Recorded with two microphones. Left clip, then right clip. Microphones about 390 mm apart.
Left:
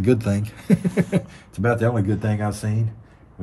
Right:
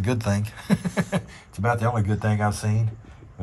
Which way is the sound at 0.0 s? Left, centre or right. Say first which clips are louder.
Left 6 dB; centre.